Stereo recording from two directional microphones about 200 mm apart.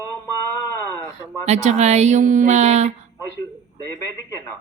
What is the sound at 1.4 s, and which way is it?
A woman's voice, 35° right (ahead or behind).